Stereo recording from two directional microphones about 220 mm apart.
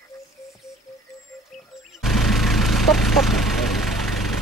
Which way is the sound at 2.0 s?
Centre (ahead or behind).